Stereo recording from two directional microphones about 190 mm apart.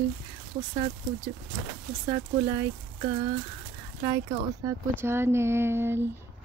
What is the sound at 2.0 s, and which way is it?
Speech, 20° right (ahead or behind).